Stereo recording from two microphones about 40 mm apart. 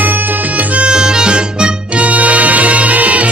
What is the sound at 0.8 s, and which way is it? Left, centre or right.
Harmonica, centre.